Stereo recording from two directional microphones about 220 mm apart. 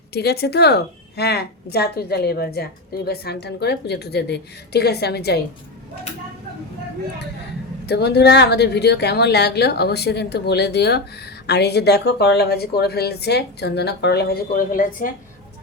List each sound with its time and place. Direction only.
0.1 s a woman's voice: 45° left (ahead or behind)
7.9 s a woman's voice: 50° left (ahead or behind)